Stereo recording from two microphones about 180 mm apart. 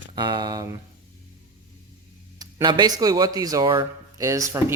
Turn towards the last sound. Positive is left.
turn(degrees=-15)  # may be behind; listen again after turning